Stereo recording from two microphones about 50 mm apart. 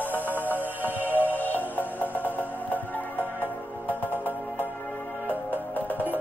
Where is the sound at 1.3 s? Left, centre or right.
Left.